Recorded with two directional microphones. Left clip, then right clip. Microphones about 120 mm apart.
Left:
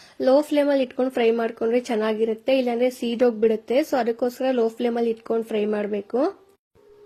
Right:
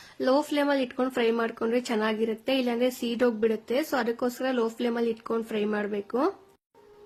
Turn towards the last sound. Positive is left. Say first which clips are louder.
# left 4 dB
turn(degrees=20)  # may be behind; listen again after turning